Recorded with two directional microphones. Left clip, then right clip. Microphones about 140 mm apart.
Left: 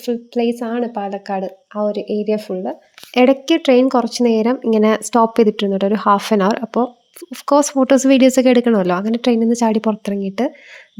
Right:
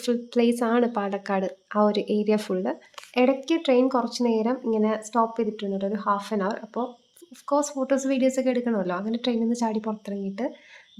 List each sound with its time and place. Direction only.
0.0 s a woman's voice: 15° left (ahead or behind)
3.2 s speech: 55° left (ahead or behind)